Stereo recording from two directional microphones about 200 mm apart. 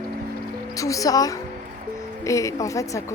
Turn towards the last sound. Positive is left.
turn(degrees=15)  # may be behind; listen again after turning